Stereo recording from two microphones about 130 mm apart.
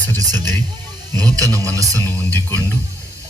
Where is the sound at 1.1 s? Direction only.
30° right (ahead or behind).